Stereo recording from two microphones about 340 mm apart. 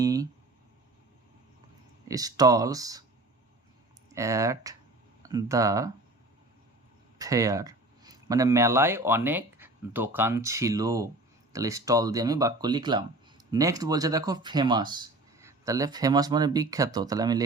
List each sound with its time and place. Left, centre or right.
0.0 s a sound: centre
2.0 s speech: centre
4.1 s speech: centre
7.2 s speech: centre